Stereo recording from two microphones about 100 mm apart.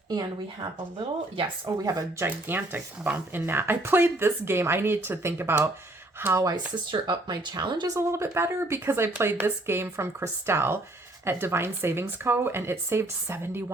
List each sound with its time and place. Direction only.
0.1 s speech: 40° right (ahead or behind)
1.6 s speech: 30° right (ahead or behind)
6.9 s speech: 50° right (ahead or behind)
7.9 s speech: 30° right (ahead or behind)